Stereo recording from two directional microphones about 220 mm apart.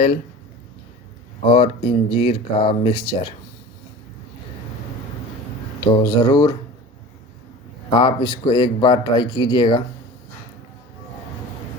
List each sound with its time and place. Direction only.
1.5 s a man's voice: 25° left (ahead or behind)
5.8 s speech: 20° left (ahead or behind)
7.9 s a man's voice: 20° left (ahead or behind)